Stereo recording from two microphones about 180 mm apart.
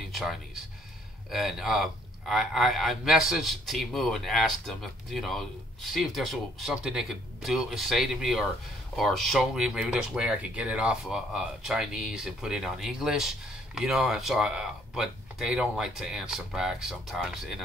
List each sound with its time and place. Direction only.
0.1 s music: centre (ahead or behind)
1.3 s a man's voice: centre (ahead or behind)